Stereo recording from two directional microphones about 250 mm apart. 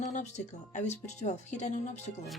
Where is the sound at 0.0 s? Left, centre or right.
Left.